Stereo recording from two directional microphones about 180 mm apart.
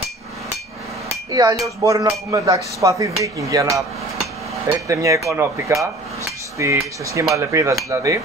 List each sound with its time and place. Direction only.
1.3 s a sound: 20° right (ahead or behind)
1.9 s speech: 20° right (ahead or behind)
4.6 s speech: 15° right (ahead or behind)